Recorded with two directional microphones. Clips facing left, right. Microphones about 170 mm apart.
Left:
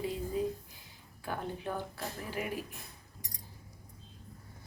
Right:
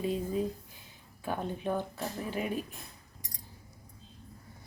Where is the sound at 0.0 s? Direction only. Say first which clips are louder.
Right 3 dB; 20° right (ahead or behind).